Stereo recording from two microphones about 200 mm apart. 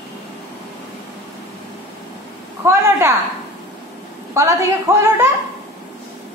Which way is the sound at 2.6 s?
15° right (ahead or behind).